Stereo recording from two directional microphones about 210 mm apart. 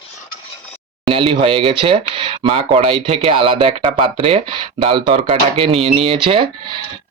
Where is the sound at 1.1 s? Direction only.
25° right (ahead or behind).